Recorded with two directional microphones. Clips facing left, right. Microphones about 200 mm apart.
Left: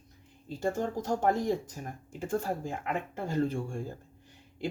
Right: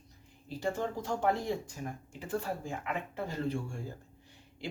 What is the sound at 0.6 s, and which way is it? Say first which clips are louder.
Speech: left 3 dB; 45° left (ahead or behind).